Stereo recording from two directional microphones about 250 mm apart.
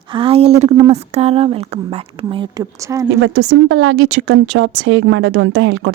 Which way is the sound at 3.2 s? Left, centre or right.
Right.